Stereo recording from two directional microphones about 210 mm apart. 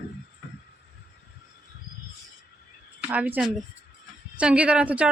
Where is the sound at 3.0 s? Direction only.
5° right (ahead or behind).